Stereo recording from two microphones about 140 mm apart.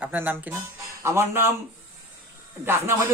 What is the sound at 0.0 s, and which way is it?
A man's voice, 10° right (ahead or behind).